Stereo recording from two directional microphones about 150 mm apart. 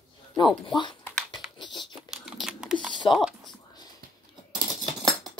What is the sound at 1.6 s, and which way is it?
Crumpling, 30° left (ahead or behind).